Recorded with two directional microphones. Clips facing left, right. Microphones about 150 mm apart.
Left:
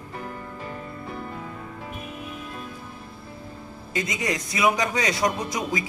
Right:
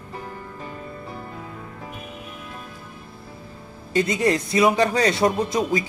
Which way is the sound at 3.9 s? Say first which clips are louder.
Right 7 dB; 30° right (ahead or behind).